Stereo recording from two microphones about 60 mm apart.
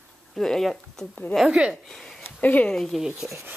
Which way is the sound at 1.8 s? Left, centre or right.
Centre.